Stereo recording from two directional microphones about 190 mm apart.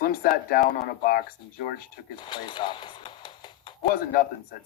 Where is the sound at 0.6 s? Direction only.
40° left (ahead or behind).